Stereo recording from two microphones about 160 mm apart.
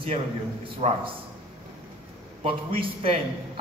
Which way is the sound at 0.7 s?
35° right (ahead or behind).